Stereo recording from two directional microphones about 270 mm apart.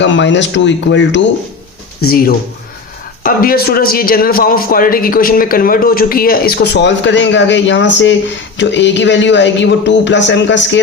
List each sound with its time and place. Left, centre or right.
0.0 s a man's voice: left